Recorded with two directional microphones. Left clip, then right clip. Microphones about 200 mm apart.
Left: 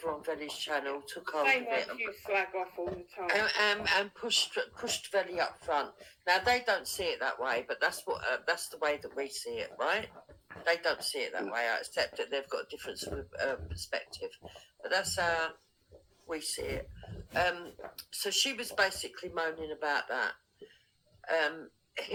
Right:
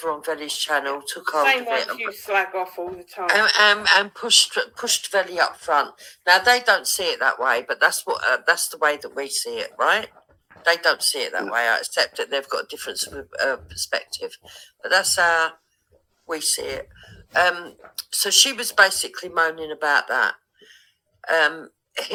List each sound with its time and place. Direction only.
0.0 s speech: 35° right (ahead or behind)